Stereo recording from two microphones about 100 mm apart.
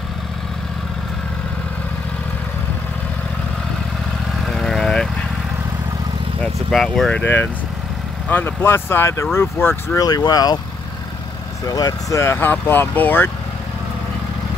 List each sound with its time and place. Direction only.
4.5 s vehicle: 5° left (ahead or behind)
6.4 s speech: 5° left (ahead or behind)
8.3 s speech: 20° left (ahead or behind)
9.9 s speech: 40° left (ahead or behind)
11.6 s speech: 35° left (ahead or behind)
12.4 s speech: 20° left (ahead or behind)